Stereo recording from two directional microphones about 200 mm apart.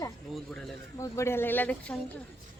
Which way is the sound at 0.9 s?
15° left (ahead or behind).